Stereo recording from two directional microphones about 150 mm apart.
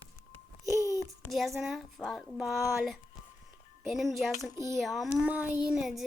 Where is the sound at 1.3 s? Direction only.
Centre (ahead or behind).